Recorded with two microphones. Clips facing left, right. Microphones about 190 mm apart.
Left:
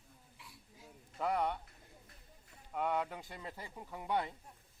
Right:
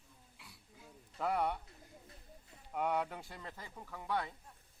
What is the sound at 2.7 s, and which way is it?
Speech, 5° right (ahead or behind).